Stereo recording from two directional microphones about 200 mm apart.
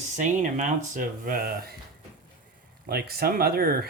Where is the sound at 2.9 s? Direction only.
50° right (ahead or behind).